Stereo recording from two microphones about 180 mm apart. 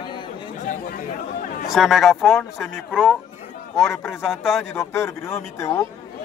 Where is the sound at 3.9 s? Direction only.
15° left (ahead or behind).